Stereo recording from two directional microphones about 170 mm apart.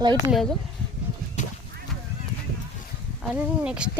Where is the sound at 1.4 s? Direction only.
45° left (ahead or behind).